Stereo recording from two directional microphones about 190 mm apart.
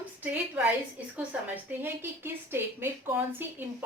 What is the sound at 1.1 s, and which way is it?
A woman's voice, 10° right (ahead or behind).